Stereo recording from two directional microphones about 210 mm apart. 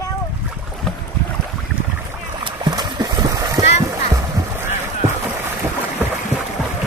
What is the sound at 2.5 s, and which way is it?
Music, 20° right (ahead or behind).